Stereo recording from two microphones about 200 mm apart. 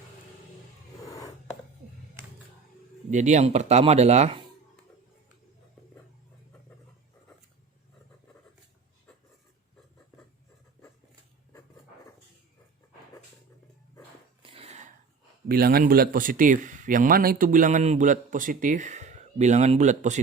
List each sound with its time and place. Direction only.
1.0 s writing: 15° left (ahead or behind)
3.1 s a man's voice: 35° right (ahead or behind)
14.4 s a sound: 30° right (ahead or behind)
15.4 s a man's voice: 50° right (ahead or behind)